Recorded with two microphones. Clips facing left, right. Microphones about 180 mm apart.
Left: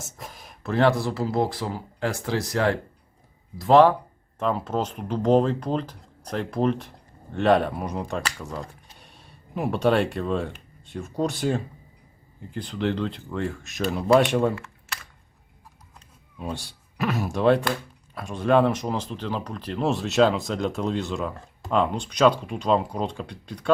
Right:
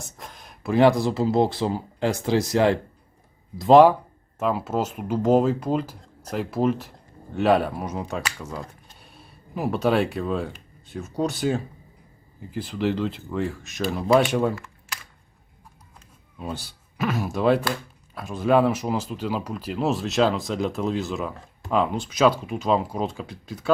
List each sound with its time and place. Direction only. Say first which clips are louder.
0.0 s a sound: left 1 dB; 5° left (ahead or behind)
0.6 s speech: right 3 dB; 15° right (ahead or behind)
16.4 s speech: even; centre (ahead or behind)